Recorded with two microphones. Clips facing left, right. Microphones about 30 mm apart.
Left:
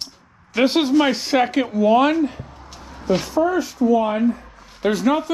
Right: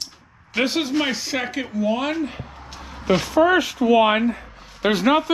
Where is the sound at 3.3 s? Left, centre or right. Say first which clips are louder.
Right 3 dB; right.